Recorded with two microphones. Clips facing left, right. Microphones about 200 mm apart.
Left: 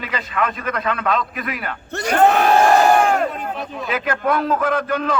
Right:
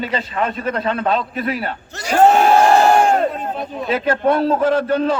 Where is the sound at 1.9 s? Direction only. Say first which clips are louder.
Left 6 dB; 60° left (ahead or behind).